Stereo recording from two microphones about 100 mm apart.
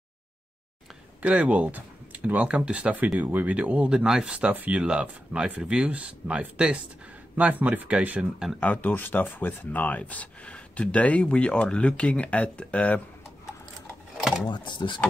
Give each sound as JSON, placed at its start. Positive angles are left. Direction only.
{"t": 1.2, "sound": "speech", "side_deg": -15}
{"t": 8.5, "sound": "speech", "side_deg": 15}
{"t": 14.5, "sound": "speech", "side_deg": 50}